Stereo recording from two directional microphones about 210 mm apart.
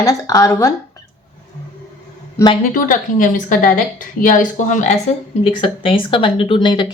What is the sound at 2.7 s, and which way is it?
A woman's voice, 40° left (ahead or behind).